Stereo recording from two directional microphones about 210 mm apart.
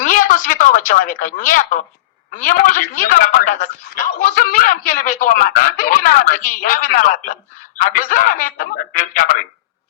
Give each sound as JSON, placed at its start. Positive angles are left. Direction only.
{"t": 0.0, "sound": "a woman's voice", "side_deg": 40}